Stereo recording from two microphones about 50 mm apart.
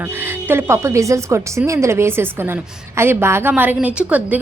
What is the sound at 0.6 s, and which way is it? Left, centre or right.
A woman's voice, right.